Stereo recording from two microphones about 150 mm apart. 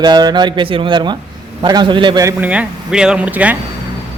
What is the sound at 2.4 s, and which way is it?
Speech, 10° right (ahead or behind).